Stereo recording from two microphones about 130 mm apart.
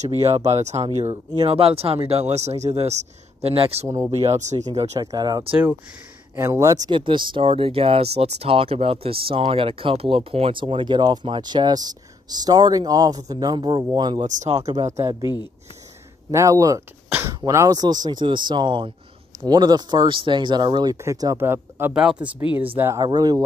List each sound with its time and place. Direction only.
0.2 s speech: 55° right (ahead or behind)
1.1 s speech: 40° right (ahead or behind); by 4.6 s 60° right (ahead or behind)
4.9 s speech: 30° right (ahead or behind)
6.3 s speech: 20° right (ahead or behind)
6.9 s speech: 40° right (ahead or behind)
14.2 s speech: 65° right (ahead or behind)
14.9 s speech: 25° right (ahead or behind)
15.2 s speech: 35° left (ahead or behind)
16.3 s speech: 25° right (ahead or behind)
21.9 s speech: 5° right (ahead or behind)
22.8 s speech: 20° right (ahead or behind)
23.0 s speech: 30° right (ahead or behind)